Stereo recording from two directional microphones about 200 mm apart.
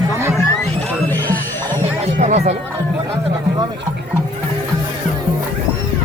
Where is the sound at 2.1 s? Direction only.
35° right (ahead or behind).